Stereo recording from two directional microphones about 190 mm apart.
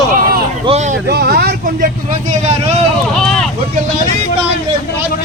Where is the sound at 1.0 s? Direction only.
55° right (ahead or behind).